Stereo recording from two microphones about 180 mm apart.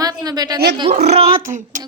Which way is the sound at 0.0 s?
20° right (ahead or behind).